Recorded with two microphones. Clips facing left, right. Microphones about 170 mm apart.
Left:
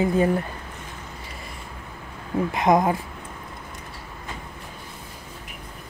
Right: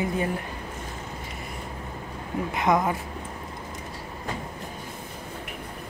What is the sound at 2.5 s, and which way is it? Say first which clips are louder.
Speech: left 4 dB; 20° left (ahead or behind).